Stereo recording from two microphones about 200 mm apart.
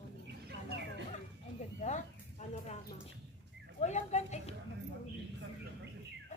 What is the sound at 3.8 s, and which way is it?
Speech, 35° left (ahead or behind).